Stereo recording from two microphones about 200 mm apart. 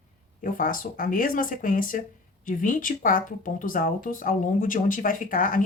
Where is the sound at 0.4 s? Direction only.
45° left (ahead or behind).